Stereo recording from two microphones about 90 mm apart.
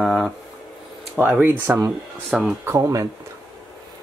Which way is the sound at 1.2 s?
15° right (ahead or behind).